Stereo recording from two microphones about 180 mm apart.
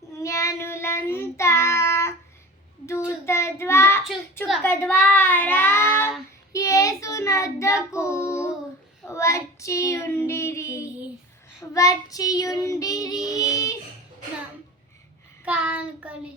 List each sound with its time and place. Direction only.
0.1 s child singing: 15° left (ahead or behind)
3.2 s child singing: 15° left (ahead or behind)
15.4 s child singing: 10° right (ahead or behind)